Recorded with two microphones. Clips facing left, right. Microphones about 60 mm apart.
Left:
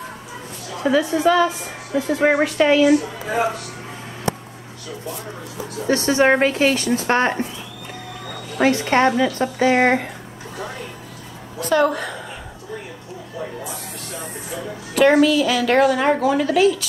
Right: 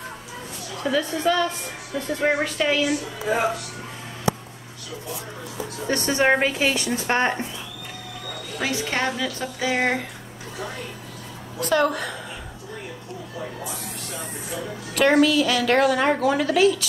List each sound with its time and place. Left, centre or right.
0.7 s a woman's voice: centre
5.8 s speech: centre
8.5 s a woman's voice: left
9.1 s a woman's voice: left
11.5 s speech: centre
13.4 s speech: centre